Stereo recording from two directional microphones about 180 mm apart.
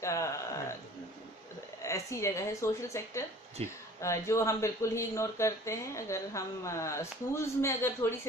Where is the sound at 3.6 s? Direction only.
35° right (ahead or behind).